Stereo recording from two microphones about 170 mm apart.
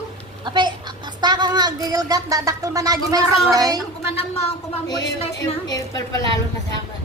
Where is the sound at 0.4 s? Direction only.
25° right (ahead or behind).